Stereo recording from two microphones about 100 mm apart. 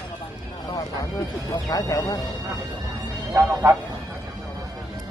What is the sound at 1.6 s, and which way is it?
Speech, 35° left (ahead or behind).